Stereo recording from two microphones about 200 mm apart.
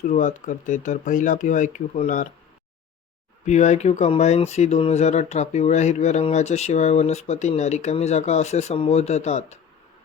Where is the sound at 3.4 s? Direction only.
35° left (ahead or behind).